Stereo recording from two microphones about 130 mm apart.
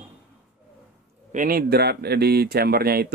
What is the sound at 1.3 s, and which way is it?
Speech, 90° right.